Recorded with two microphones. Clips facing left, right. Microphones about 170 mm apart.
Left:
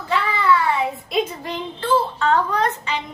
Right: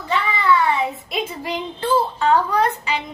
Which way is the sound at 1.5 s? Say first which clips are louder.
Even; 10° right (ahead or behind).